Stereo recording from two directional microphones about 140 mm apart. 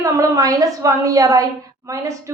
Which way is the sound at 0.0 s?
25° right (ahead or behind).